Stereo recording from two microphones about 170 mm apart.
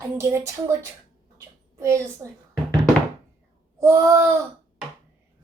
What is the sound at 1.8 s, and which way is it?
Speech, 15° right (ahead or behind).